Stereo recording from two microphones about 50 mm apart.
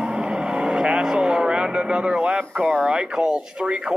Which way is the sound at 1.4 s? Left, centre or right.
Centre.